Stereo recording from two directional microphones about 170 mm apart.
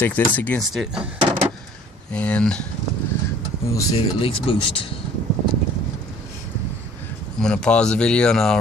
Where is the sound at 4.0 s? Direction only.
30° left (ahead or behind).